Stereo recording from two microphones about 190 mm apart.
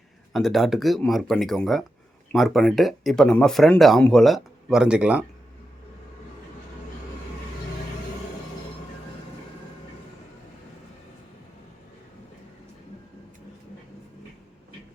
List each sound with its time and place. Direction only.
0.3 s speech: centre (ahead or behind)